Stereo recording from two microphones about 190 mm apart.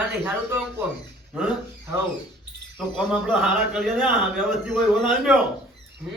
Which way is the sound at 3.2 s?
Centre (ahead or behind).